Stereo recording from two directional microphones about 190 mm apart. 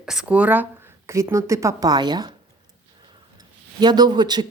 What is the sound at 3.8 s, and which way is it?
Speech, 20° right (ahead or behind).